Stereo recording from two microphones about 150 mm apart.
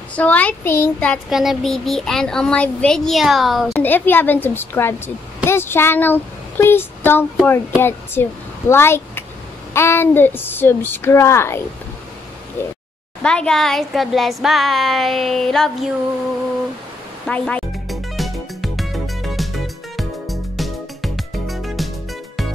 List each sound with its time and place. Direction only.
0.1 s a woman's voice: 10° left (ahead or behind)
1.3 s a woman's voice: centre (ahead or behind)
3.8 s a woman's voice: 10° left (ahead or behind)
17.3 s music: 10° left (ahead or behind)